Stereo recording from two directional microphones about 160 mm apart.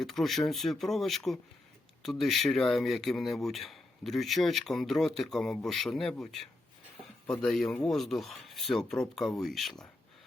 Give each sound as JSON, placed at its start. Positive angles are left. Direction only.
{"t": 0.0, "sound": "speech", "side_deg": 0}